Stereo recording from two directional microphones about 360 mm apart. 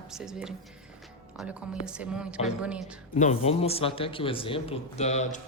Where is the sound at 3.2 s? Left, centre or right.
Centre.